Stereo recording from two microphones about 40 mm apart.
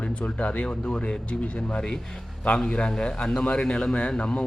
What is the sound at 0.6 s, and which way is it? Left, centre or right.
A man's voice, left.